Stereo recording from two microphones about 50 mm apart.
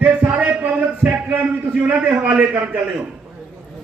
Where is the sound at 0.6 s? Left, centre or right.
Right.